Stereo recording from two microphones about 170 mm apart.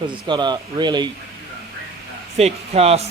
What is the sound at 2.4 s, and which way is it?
Speech, 40° right (ahead or behind).